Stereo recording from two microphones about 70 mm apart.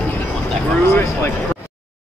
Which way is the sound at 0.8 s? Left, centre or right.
Left.